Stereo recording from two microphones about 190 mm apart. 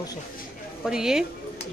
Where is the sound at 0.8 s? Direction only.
5° right (ahead or behind).